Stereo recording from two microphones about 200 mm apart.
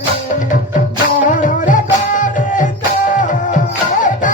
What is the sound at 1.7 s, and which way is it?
Music, 40° left (ahead or behind).